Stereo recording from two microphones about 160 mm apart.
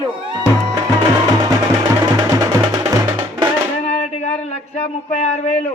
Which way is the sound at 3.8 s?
40° left (ahead or behind).